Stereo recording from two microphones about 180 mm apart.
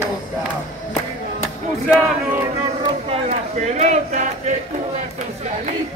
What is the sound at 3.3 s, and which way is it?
Speech, 40° right (ahead or behind).